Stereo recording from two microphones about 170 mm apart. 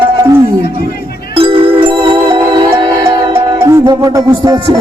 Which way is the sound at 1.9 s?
25° right (ahead or behind).